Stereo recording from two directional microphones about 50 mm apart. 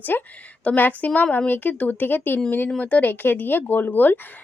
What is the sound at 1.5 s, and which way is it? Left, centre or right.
Speech, left.